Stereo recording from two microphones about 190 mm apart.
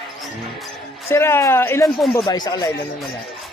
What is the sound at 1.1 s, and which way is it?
Speech, 15° left (ahead or behind).